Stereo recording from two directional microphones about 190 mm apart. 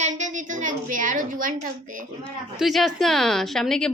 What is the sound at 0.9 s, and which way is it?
A woman's voice, 45° right (ahead or behind).